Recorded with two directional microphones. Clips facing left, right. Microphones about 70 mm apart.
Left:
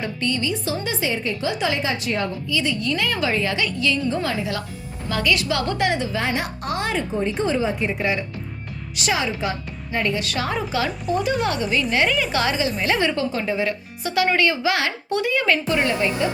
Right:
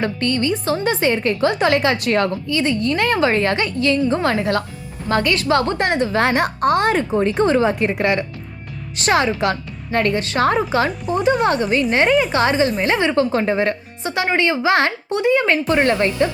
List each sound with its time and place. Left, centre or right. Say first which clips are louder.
0.0 s a woman's voice: right 5 dB; right
2.5 s a woman's voice: right 4 dB; right
5.0 s speech: right 4 dB; right
5.9 s a woman's voice: right 6 dB; right
7.1 s a woman's voice: right 6 dB; right
9.0 s a woman's voice: right 6 dB; right
10.2 s speech: right 5 dB; right
10.4 s a woman's voice: right 9 dB; right
11.2 s speech: right 8 dB; right
13.1 s a woman's voice: right 6 dB; right
14.0 s a woman's voice: right 1 dB; right